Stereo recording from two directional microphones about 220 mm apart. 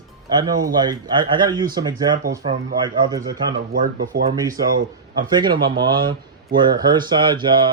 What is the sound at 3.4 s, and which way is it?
Speech, 45° right (ahead or behind).